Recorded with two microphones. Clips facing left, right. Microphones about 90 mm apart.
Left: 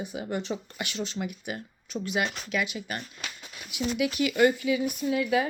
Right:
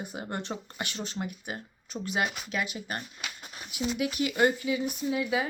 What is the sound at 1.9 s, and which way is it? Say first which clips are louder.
Speech: left 2 dB; 30° right (ahead or behind).